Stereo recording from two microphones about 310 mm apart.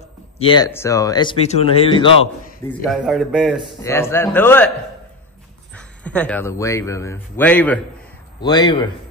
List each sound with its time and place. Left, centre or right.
0.4 s speech: centre
2.7 s speech: centre
5.8 s speech: centre